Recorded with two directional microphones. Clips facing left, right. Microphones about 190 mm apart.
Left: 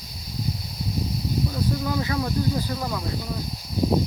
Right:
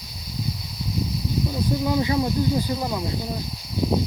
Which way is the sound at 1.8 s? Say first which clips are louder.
Right 4 dB; 20° right (ahead or behind).